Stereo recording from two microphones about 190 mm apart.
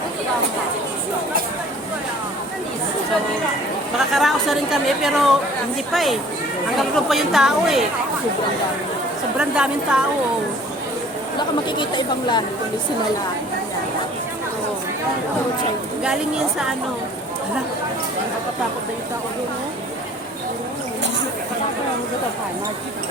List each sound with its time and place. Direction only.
3.9 s a woman's voice: centre (ahead or behind)
9.4 s a woman's voice: 5° right (ahead or behind)
11.3 s speech: 25° left (ahead or behind)